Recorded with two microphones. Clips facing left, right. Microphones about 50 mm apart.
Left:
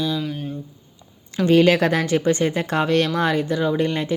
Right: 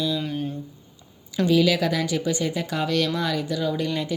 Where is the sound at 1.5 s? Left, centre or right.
Left.